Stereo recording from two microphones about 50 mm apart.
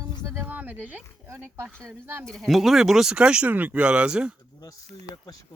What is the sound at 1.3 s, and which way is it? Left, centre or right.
Speech, right.